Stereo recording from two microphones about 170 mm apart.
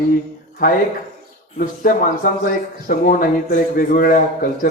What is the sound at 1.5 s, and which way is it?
Speech, 55° left (ahead or behind).